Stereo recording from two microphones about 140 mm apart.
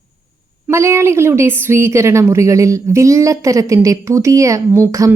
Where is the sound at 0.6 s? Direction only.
20° right (ahead or behind).